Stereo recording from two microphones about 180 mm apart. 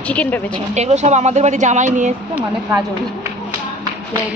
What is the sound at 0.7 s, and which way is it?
A woman's voice, 40° right (ahead or behind).